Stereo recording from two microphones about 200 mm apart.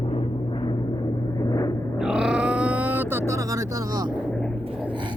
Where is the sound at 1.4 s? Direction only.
20° left (ahead or behind).